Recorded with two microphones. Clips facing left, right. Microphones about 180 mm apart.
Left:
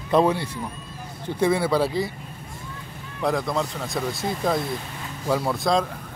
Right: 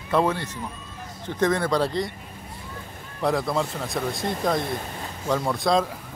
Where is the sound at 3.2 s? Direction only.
Centre (ahead or behind).